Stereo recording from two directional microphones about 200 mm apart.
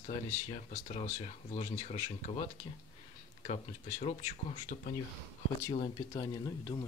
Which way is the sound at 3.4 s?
30° left (ahead or behind).